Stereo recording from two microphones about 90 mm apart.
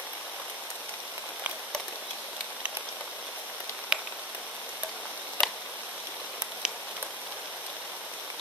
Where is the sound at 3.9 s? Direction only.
5° right (ahead or behind).